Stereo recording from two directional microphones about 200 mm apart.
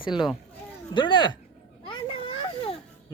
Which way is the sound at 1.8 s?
25° left (ahead or behind).